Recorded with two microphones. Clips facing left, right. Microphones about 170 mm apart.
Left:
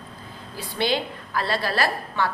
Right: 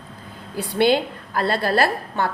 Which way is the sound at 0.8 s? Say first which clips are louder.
Right 7 dB; 55° right (ahead or behind).